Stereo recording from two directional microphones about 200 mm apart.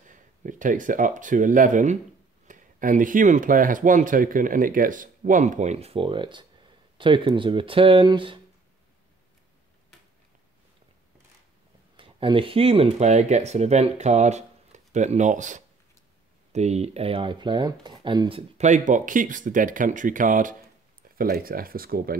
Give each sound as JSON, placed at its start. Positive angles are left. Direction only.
{"t": 0.0, "sound": "speech", "side_deg": -40}
{"t": 12.0, "sound": "speech", "side_deg": -25}
{"t": 18.6, "sound": "speech", "side_deg": -40}